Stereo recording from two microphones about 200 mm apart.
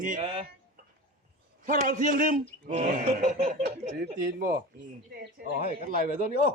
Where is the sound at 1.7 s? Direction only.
40° right (ahead or behind).